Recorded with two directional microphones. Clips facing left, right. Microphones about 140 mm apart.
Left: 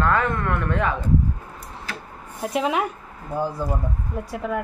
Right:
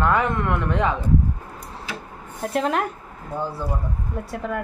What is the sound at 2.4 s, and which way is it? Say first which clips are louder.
Speech: even; 5° left (ahead or behind).